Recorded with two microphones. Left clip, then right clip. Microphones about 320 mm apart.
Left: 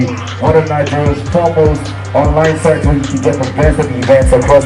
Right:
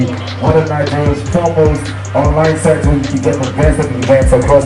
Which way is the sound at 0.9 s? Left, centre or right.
Centre.